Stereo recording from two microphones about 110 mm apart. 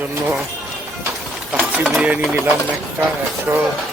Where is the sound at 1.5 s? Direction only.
Centre (ahead or behind).